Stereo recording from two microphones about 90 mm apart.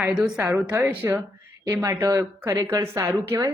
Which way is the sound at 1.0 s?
35° right (ahead or behind).